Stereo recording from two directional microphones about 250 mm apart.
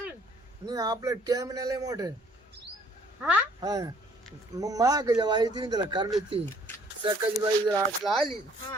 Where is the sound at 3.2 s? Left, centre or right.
Centre.